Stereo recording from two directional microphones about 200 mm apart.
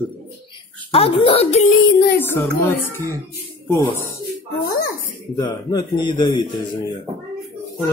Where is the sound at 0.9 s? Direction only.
30° left (ahead or behind).